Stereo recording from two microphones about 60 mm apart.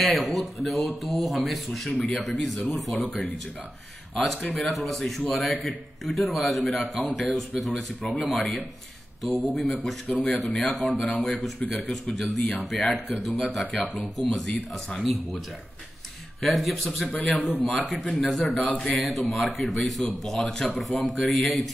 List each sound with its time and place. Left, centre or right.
0.0 s speech: centre
9.2 s speech: centre
17.1 s a man's voice: left
17.6 s speech: centre
18.9 s speech: centre